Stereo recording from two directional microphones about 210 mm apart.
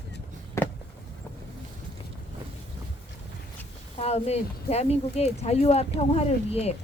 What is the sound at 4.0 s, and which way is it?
A woman's voice, 30° left (ahead or behind).